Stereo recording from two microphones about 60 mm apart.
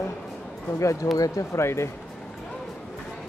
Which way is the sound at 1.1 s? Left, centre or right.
Left.